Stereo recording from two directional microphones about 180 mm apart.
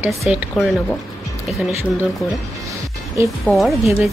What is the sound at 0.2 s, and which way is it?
Speech, 5° right (ahead or behind).